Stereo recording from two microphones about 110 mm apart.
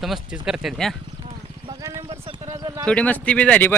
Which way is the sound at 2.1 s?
65° right (ahead or behind).